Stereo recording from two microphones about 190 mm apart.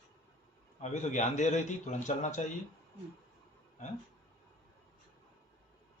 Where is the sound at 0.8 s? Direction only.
40° left (ahead or behind).